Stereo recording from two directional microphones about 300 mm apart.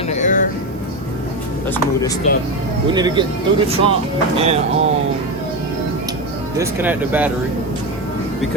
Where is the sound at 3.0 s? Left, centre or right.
Centre.